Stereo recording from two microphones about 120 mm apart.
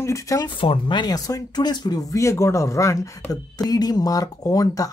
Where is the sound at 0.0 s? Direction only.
25° left (ahead or behind).